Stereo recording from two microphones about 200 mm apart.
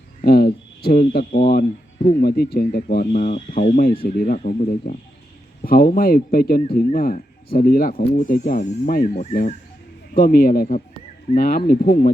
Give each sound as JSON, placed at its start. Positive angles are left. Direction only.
{"t": 0.2, "sound": "speech", "side_deg": 50}